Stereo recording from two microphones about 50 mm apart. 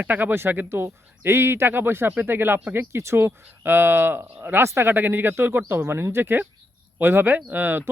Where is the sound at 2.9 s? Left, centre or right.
Right.